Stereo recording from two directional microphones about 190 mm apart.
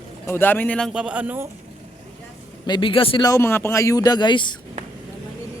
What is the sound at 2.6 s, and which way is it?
A man's voice, 25° left (ahead or behind).